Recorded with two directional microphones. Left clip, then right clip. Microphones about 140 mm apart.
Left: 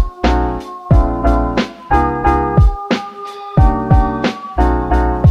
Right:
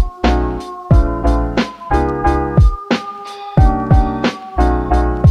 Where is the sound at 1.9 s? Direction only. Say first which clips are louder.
Left 4 dB; 15° left (ahead or behind).